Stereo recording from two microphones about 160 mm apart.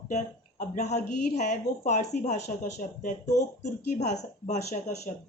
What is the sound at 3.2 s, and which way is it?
Speech, 20° left (ahead or behind).